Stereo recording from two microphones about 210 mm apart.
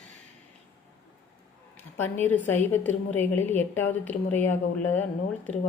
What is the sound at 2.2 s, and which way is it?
A woman's voice, 10° left (ahead or behind).